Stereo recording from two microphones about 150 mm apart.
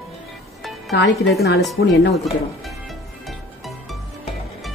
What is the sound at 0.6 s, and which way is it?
Music, centre (ahead or behind).